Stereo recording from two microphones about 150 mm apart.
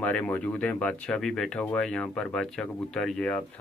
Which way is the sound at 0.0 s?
10° left (ahead or behind).